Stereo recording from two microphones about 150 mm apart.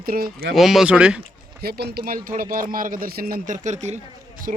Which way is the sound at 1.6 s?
90° right.